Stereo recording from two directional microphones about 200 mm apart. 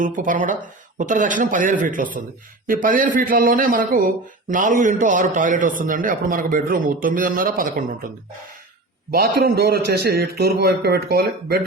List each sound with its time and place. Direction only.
0.0 s speech: 40° right (ahead or behind)
9.1 s speech: 50° right (ahead or behind)